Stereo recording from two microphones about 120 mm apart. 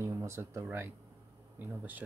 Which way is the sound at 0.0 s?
20° right (ahead or behind).